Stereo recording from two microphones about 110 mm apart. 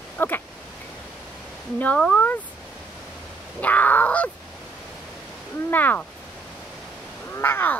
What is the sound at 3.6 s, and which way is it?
Speech, 15° left (ahead or behind).